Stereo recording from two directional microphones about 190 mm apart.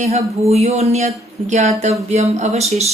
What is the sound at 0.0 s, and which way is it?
Speech, 35° right (ahead or behind).